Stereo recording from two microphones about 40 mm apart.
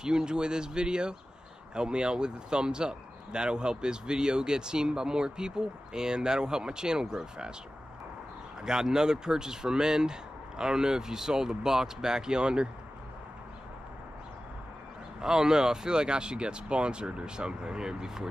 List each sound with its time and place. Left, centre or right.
0.0 s speech: centre
8.6 s speech: centre
15.1 s speech: centre